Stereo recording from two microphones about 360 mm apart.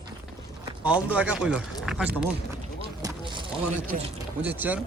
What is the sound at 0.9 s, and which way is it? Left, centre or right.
Speech, centre.